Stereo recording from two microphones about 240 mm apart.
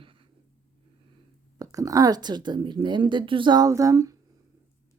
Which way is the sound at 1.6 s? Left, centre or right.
Centre.